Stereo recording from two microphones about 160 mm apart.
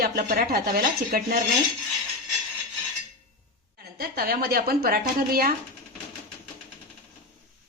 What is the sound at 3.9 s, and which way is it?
Speech, 70° right (ahead or behind).